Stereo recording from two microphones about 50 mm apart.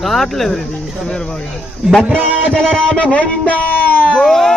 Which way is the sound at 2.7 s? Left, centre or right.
Left.